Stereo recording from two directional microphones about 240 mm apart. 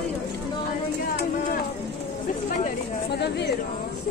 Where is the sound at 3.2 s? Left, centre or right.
Left.